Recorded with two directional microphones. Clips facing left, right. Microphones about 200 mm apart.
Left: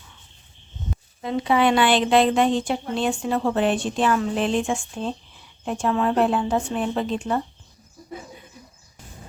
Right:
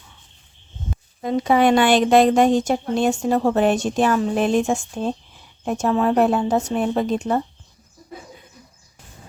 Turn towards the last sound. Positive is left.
turn(degrees=-40)  # may be behind; listen again after turning